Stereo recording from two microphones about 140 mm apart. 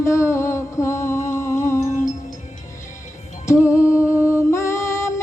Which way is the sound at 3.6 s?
10° right (ahead or behind).